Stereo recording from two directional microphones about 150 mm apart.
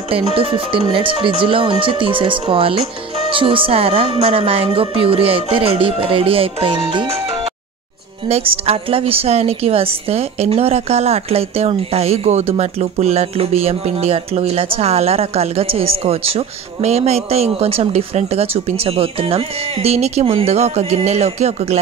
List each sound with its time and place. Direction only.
0.1 s speech: 40° right (ahead or behind)
8.3 s a woman's voice: 40° right (ahead or behind)